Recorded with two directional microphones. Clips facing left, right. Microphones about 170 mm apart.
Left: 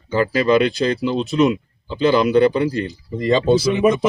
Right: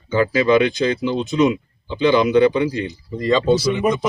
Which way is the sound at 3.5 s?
50° left (ahead or behind).